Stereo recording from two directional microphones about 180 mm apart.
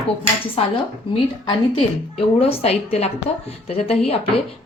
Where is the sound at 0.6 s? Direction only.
35° left (ahead or behind).